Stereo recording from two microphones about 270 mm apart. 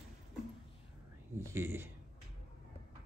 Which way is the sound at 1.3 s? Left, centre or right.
Centre.